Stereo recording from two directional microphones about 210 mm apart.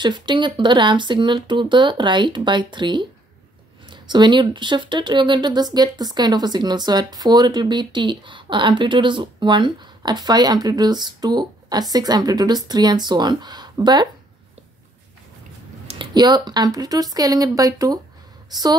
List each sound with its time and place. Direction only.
0.0 s speech: 20° right (ahead or behind)
15.9 s a woman's voice: 20° right (ahead or behind)